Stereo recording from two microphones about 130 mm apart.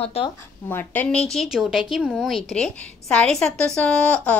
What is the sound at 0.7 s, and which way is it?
Speech, 15° left (ahead or behind).